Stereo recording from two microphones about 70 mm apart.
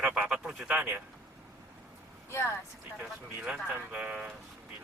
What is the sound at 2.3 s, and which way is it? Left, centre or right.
Speech, left.